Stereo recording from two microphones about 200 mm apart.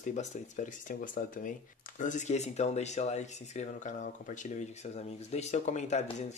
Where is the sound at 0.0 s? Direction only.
40° left (ahead or behind).